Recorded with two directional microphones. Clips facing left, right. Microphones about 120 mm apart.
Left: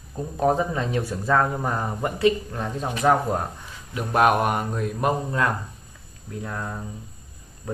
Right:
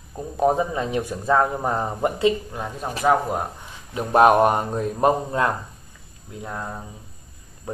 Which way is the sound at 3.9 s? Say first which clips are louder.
Right 4 dB; 30° right (ahead or behind).